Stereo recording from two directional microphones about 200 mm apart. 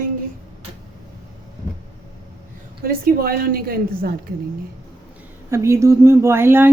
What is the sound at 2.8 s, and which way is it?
A woman's voice, 50° right (ahead or behind).